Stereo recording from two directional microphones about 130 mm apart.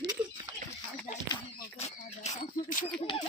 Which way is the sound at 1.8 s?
65° left (ahead or behind).